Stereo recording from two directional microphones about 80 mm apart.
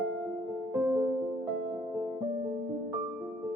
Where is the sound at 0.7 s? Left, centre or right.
Right.